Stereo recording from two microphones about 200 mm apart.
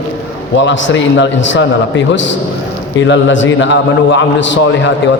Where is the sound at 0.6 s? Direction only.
65° left (ahead or behind).